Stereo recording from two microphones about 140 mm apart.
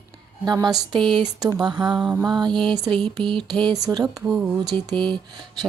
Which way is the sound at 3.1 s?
35° right (ahead or behind).